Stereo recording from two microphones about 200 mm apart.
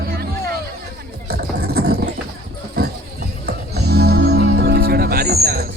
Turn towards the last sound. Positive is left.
turn(degrees=-50)  # may be behind; listen again after turning